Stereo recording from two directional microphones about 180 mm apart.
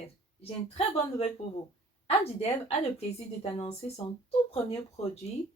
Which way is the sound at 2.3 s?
35° left (ahead or behind).